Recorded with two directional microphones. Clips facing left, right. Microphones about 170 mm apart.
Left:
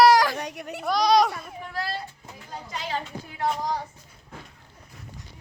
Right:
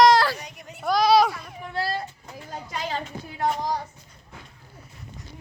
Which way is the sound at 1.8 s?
25° right (ahead or behind).